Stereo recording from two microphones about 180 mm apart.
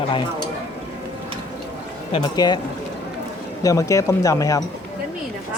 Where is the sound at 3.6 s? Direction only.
20° left (ahead or behind).